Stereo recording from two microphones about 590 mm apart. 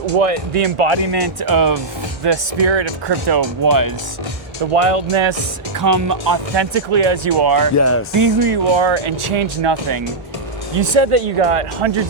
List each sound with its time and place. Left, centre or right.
0.0 s speech: right
1.1 s speech: right
4.7 s speech: right
5.8 s speech: right
6.7 s speech: right
7.8 s music: left
8.4 s speech: right
10.8 s speech: right